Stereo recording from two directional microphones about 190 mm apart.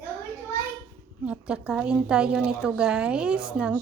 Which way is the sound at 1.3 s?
5° right (ahead or behind).